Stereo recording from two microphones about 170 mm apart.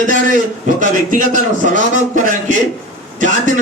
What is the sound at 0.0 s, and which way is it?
A man's voice, 50° right (ahead or behind).